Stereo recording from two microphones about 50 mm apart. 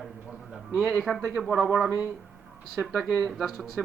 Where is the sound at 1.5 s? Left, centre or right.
Centre.